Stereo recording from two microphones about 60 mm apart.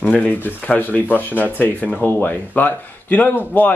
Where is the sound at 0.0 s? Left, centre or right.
Left.